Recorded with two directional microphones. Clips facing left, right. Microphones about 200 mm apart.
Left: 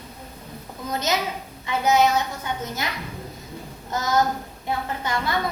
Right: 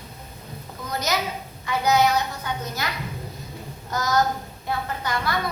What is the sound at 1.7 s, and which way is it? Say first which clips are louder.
A woman's voice: left 1 dB; 25° left (ahead or behind).